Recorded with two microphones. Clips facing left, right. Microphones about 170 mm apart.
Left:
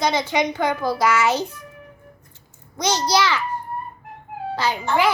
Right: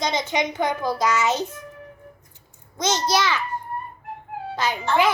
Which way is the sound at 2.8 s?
20° right (ahead or behind).